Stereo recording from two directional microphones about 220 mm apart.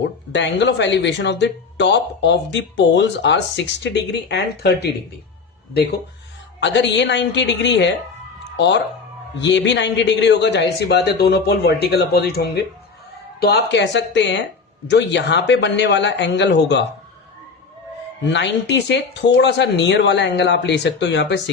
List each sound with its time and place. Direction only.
0.3 s speech: 55° left (ahead or behind)
6.6 s speech: 55° left (ahead or behind)
18.3 s speech: 55° left (ahead or behind)